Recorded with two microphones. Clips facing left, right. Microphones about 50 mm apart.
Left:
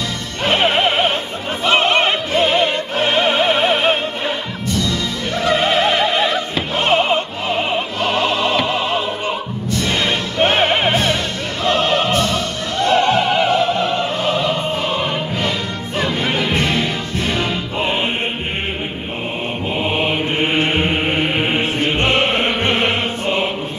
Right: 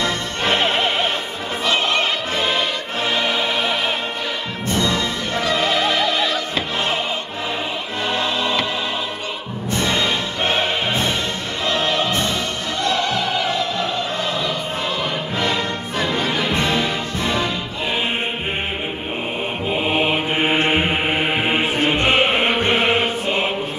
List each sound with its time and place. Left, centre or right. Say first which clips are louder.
0.5 s music: left 4 dB; left
4.6 s music: right 1 dB; right
5.4 s music: left 4 dB; left
6.8 s music: left 7 dB; left
9.7 s music: even; right
9.9 s music: left 3 dB; left
12.8 s opera: left 7 dB; left
16.2 s music: left 2 dB; left
19.7 s mantra: even; centre
20.7 s music: left 1 dB; centre
22.7 s mantra: even; right